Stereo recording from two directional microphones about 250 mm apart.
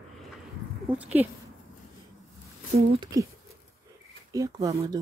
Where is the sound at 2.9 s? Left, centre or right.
Centre.